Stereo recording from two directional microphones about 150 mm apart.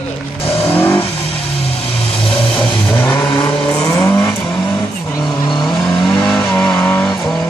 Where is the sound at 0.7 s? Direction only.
15° left (ahead or behind).